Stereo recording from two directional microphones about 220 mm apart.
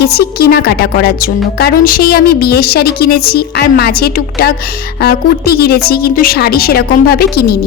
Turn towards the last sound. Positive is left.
turn(degrees=45)  # may be behind; listen again after turning